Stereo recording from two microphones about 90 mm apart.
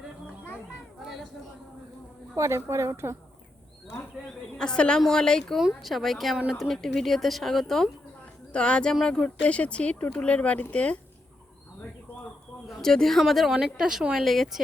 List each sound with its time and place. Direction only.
2.3 s a woman's voice: 30° right (ahead or behind)
4.5 s speech: 10° left (ahead or behind)
12.6 s speech: centre (ahead or behind)